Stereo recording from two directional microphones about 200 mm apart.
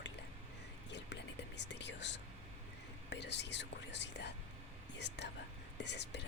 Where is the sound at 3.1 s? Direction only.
60° left (ahead or behind).